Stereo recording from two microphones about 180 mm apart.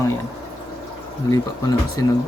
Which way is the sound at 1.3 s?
20° left (ahead or behind).